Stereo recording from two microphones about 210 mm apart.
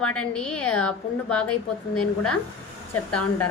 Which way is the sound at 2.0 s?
90° left.